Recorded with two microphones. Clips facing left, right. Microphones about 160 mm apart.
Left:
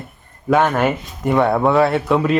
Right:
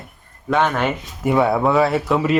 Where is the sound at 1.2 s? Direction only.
5° right (ahead or behind).